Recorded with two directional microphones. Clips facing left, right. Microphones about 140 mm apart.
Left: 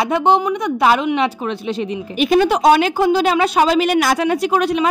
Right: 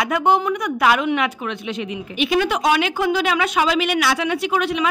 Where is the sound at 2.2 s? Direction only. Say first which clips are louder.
Left 6 dB; 40° left (ahead or behind).